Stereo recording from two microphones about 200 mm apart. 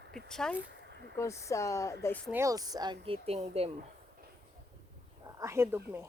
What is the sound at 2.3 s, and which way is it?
A woman's voice, 15° right (ahead or behind).